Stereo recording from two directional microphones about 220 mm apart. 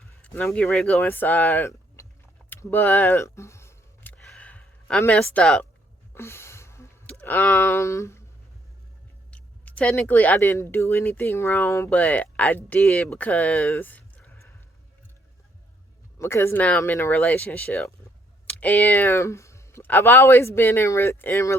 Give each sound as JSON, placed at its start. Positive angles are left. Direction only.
{"t": 0.2, "sound": "speech", "side_deg": 5}
{"t": 2.5, "sound": "a sound", "side_deg": 10}
{"t": 9.3, "sound": "speech", "side_deg": 5}
{"t": 16.1, "sound": "speech", "side_deg": 10}